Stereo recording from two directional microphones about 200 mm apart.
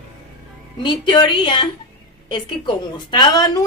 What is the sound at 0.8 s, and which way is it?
Speech, 20° left (ahead or behind).